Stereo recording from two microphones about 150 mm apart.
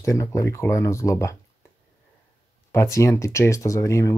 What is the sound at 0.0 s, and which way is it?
Speech, 20° left (ahead or behind).